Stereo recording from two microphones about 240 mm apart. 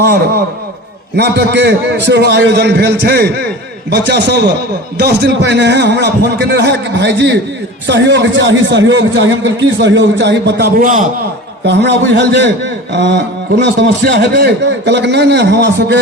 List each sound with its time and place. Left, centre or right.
1.1 s a man's voice: right
11.6 s a man's voice: right